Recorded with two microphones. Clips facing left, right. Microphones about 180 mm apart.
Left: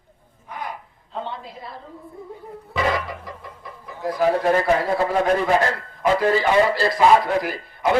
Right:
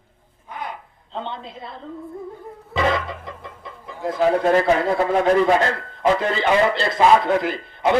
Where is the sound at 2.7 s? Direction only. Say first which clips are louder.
Right 2 dB; 25° right (ahead or behind).